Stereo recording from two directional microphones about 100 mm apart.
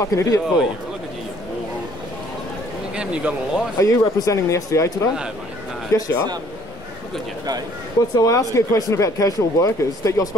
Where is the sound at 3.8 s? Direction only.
30° left (ahead or behind).